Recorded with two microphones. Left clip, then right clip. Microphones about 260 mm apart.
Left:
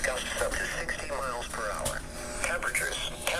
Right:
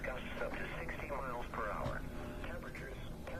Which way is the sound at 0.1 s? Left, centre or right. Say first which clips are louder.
Left 11 dB; left.